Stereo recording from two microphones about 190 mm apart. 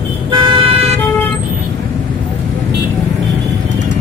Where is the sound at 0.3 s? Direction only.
30° right (ahead or behind).